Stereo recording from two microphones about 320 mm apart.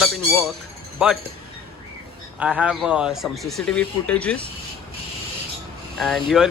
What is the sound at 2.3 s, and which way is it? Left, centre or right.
Speech, centre.